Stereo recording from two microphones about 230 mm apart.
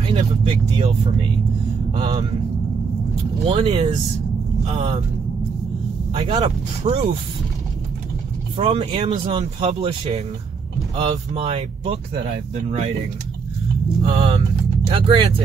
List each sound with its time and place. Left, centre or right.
0.1 s speech: right
2.0 s speech: right
3.4 s speech: right
6.1 s speech: right
8.5 s speech: right
14.0 s speech: right